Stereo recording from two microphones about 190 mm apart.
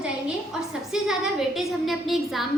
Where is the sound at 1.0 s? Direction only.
5° right (ahead or behind).